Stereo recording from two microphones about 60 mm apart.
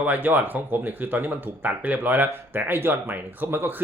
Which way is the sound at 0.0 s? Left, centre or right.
Right.